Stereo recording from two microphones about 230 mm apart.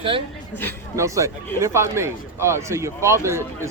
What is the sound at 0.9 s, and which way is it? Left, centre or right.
A man's voice, centre.